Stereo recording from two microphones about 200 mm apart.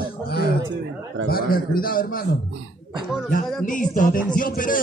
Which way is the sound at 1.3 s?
45° left (ahead or behind).